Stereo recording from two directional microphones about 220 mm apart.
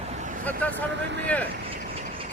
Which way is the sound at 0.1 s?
35° right (ahead or behind).